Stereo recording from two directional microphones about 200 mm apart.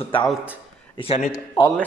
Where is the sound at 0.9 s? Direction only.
30° left (ahead or behind).